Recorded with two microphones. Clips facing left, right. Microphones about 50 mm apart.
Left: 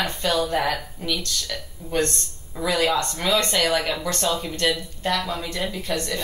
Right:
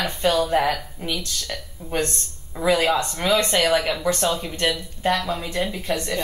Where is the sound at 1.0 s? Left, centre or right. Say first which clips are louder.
Even; right.